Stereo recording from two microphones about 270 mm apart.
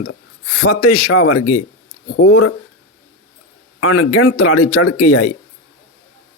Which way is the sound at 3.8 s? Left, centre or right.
Left.